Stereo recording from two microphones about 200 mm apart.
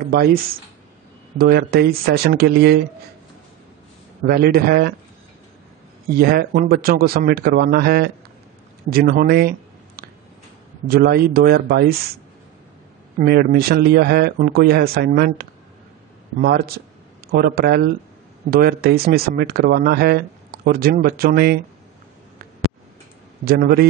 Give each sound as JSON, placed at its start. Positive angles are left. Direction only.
{"t": 0.1, "sound": "speech", "side_deg": -50}
{"t": 1.4, "sound": "speech", "side_deg": -50}
{"t": 4.3, "sound": "speech", "side_deg": -50}
{"t": 6.0, "sound": "speech", "side_deg": -50}
{"t": 13.2, "sound": "speech", "side_deg": -50}
{"t": 23.4, "sound": "speech", "side_deg": -50}